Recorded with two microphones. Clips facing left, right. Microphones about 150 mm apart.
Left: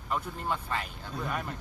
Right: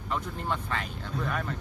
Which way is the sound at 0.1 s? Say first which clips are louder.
Even; 5° left (ahead or behind).